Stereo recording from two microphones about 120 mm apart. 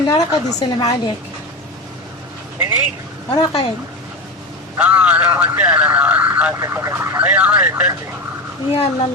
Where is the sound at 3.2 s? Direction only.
50° left (ahead or behind).